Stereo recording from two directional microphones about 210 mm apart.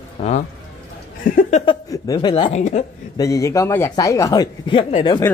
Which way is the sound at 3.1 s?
15° left (ahead or behind).